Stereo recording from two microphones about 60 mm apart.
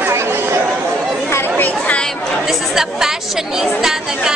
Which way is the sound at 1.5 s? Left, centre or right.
Left.